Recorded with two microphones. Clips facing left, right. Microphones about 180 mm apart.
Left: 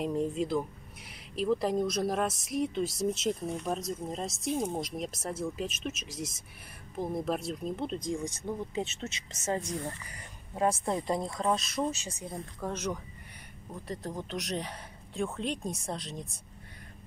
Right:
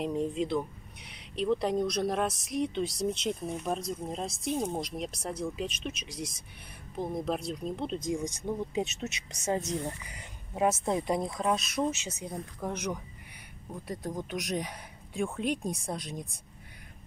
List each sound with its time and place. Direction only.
0.0 s speech: centre (ahead or behind)
8.0 s speech: 15° right (ahead or behind)